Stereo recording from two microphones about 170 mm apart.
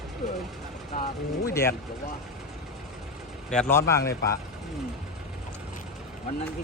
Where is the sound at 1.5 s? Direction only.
15° left (ahead or behind).